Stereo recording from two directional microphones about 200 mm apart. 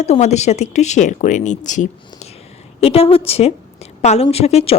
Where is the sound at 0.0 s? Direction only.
35° left (ahead or behind).